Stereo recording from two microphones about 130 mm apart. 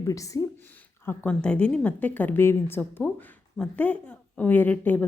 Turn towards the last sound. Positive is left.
turn(degrees=15)  # may be behind; listen again after turning